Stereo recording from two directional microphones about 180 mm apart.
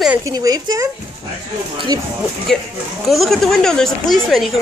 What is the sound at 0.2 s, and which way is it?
Speech, 20° right (ahead or behind).